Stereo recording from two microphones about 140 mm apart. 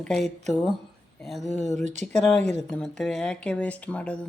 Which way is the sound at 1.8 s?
60° right (ahead or behind).